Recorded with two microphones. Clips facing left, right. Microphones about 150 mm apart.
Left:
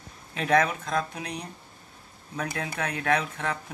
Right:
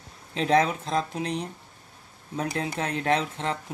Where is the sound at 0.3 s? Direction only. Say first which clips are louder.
Right 1 dB; 25° right (ahead or behind).